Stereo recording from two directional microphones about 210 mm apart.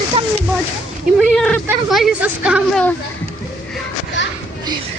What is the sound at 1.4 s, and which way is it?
Speech, 5° left (ahead or behind).